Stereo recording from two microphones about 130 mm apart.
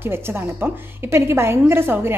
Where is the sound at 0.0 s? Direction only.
20° right (ahead or behind).